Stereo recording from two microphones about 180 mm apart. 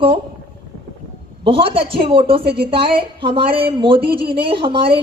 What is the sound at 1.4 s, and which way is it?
A woman's voice, 30° right (ahead or behind).